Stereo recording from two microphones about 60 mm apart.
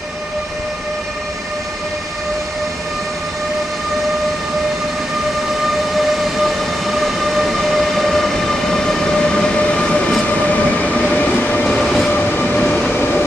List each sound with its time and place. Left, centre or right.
5.9 s train: centre
11.6 s train: centre
12.9 s train: left